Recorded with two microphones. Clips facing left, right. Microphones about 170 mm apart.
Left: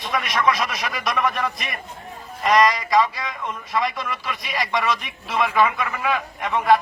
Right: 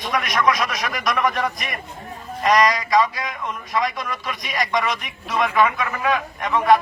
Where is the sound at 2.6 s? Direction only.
Centre (ahead or behind).